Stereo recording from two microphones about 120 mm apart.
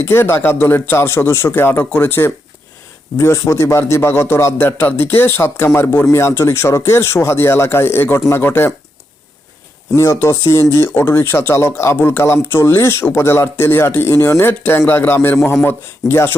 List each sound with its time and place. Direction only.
0.0 s speech: 20° left (ahead or behind)
9.9 s speech: 20° left (ahead or behind)